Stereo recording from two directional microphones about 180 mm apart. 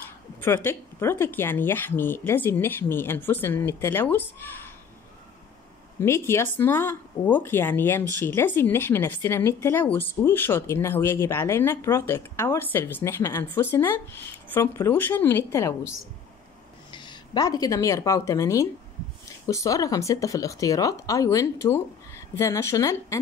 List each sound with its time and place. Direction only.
0.7 s speech: 15° left (ahead or behind)
5.9 s speech: 15° left (ahead or behind)
16.9 s speech: 25° left (ahead or behind)